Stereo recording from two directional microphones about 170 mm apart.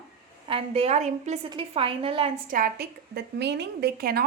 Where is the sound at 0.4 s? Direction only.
35° right (ahead or behind).